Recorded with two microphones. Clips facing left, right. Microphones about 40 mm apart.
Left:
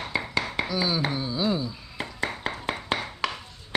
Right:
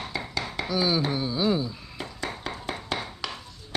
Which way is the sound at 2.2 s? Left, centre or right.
Left.